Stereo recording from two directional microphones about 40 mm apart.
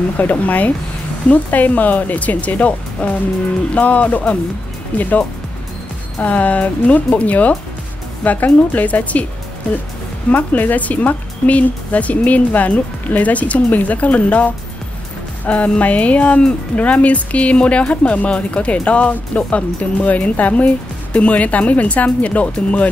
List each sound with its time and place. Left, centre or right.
0.2 s speech: left
6.2 s speech: left
10.3 s speech: left